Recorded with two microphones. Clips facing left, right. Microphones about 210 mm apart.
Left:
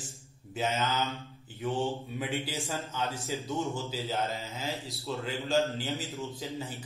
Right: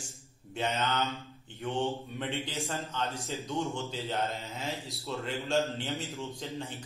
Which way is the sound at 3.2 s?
Centre (ahead or behind).